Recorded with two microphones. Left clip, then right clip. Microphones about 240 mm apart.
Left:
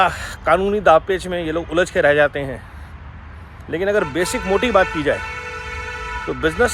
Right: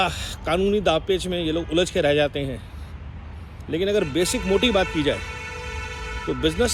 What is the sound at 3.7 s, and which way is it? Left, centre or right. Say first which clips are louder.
Speech: left 4 dB; centre.